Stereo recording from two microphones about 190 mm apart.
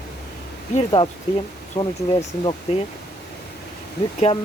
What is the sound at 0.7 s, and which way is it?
Speech, 30° left (ahead or behind).